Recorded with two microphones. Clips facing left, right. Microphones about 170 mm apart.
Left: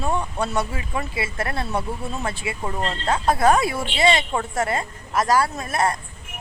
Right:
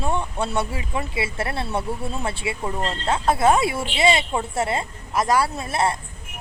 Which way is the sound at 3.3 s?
25° right (ahead or behind).